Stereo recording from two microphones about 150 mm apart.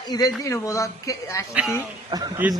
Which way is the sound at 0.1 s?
25° left (ahead or behind).